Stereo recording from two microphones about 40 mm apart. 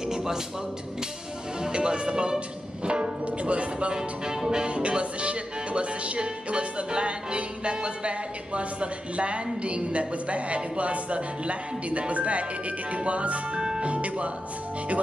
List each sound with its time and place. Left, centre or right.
0.1 s music: centre
1.6 s music: right
2.8 s speech: right
3.9 s music: centre; by 13.4 s right
13.6 s speech: centre
13.8 s speech: right